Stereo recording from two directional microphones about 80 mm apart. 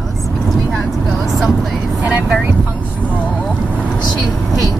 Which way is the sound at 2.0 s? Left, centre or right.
Centre.